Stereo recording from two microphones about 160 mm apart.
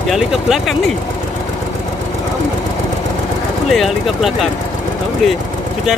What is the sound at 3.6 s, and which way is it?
Speech, centre (ahead or behind).